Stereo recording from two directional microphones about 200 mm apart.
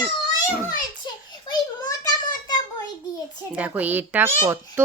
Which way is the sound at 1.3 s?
20° left (ahead or behind).